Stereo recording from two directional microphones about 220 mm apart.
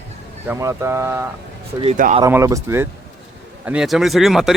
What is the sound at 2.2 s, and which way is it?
Speech, 15° right (ahead or behind).